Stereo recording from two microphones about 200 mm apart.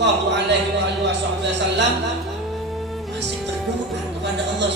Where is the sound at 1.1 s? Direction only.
60° right (ahead or behind).